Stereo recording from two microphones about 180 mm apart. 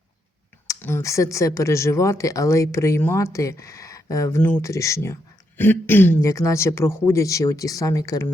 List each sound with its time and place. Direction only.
0.7 s speech: 15° left (ahead or behind)